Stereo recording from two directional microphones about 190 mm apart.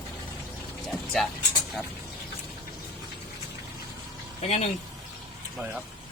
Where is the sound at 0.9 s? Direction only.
Centre (ahead or behind).